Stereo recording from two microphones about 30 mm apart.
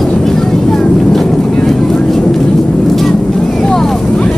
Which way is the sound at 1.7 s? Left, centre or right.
Centre.